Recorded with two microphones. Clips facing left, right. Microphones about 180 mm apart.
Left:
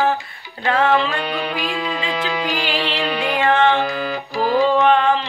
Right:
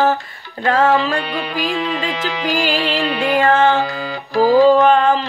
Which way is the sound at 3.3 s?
40° right (ahead or behind).